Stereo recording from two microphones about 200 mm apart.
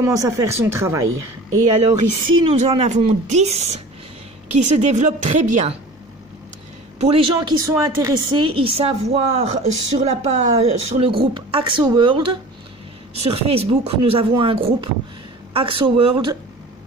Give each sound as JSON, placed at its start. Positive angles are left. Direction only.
{"t": 0.0, "sound": "speech", "side_deg": -15}
{"t": 1.0, "sound": "a woman's voice", "side_deg": -90}
{"t": 2.2, "sound": "speech", "side_deg": -30}
{"t": 7.0, "sound": "a woman's voice", "side_deg": -30}
{"t": 7.3, "sound": "a woman's voice", "side_deg": -15}